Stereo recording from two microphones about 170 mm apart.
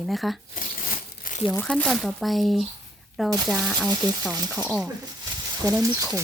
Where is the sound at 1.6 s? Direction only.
5° left (ahead or behind).